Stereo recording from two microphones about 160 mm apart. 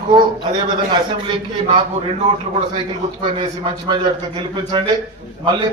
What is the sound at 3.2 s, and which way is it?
A man's voice, 35° right (ahead or behind).